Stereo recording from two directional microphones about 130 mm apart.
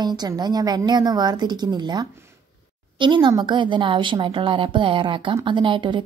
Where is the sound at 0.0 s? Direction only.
35° right (ahead or behind).